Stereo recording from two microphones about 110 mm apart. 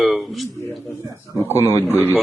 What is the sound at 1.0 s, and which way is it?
Speech, 20° right (ahead or behind).